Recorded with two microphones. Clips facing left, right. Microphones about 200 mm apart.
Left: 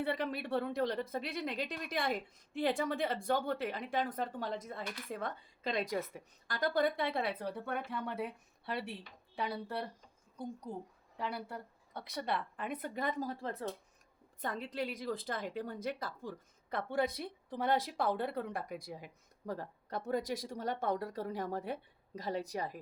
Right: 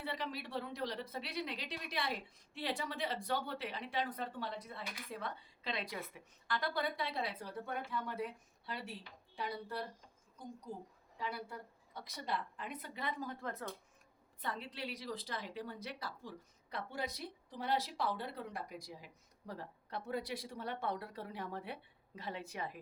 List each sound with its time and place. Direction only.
0.0 s a woman's voice: 55° left (ahead or behind)
11.2 s a woman's voice: 60° left (ahead or behind); by 13.7 s 30° left (ahead or behind)
14.4 s a woman's voice: 45° left (ahead or behind)